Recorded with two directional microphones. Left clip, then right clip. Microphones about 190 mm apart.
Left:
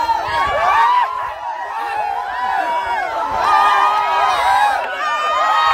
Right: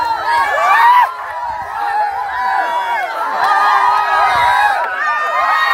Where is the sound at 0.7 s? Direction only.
50° right (ahead or behind).